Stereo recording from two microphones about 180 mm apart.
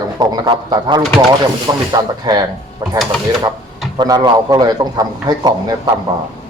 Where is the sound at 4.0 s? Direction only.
25° right (ahead or behind).